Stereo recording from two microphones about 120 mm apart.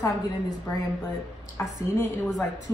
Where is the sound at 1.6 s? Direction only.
20° left (ahead or behind).